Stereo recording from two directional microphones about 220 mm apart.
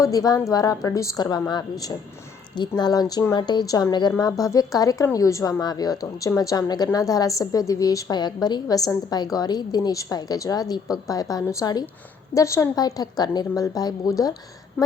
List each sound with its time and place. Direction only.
0.0 s a woman's voice: 15° left (ahead or behind)